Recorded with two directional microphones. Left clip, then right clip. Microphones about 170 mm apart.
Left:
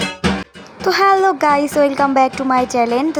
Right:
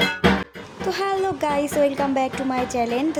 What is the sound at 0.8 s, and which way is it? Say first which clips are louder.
A child's voice: left 11 dB; 25° left (ahead or behind).